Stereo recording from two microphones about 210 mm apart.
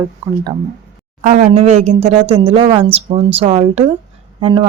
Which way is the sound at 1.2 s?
35° right (ahead or behind).